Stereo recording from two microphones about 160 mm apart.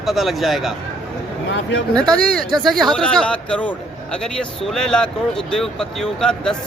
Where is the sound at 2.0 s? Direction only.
5° left (ahead or behind).